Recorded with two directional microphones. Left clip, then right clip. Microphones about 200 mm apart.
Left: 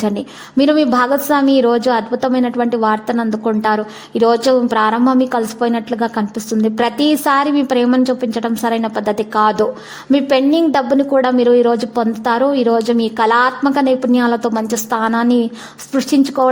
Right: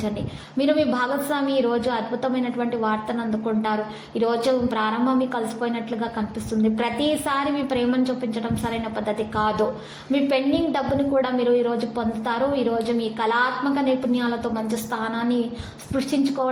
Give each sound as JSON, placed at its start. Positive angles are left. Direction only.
{"t": 0.5, "sound": "a woman's voice", "side_deg": 50}